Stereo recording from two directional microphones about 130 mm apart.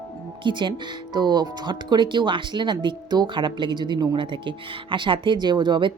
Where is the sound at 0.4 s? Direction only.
40° right (ahead or behind).